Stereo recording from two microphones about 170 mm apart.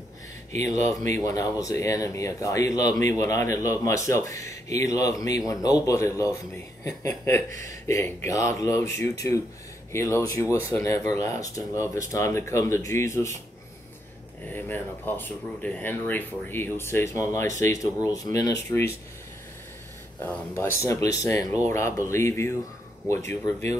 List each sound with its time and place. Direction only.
0.7 s speech: 45° right (ahead or behind)
1.2 s speech: 20° left (ahead or behind)
14.5 s speech: 10° left (ahead or behind)
20.2 s speech: 10° left (ahead or behind)